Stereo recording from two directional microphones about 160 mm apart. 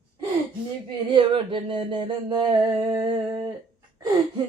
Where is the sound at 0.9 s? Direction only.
30° right (ahead or behind).